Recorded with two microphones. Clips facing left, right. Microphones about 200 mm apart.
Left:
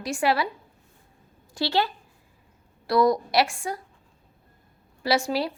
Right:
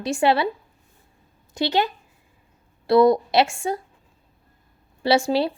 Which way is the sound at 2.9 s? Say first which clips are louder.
Right 5 dB; 25° right (ahead or behind).